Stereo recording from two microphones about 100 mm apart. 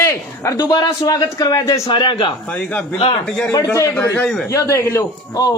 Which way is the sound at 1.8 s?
55° left (ahead or behind).